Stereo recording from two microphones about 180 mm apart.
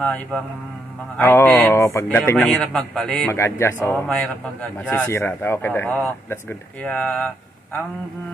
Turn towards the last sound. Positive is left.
turn(degrees=5)  # may be behind; listen again after turning